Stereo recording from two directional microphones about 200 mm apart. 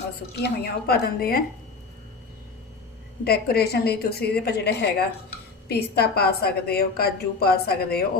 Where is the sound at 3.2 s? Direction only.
50° left (ahead or behind).